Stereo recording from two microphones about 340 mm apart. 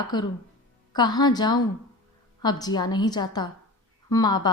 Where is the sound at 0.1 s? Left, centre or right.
Centre.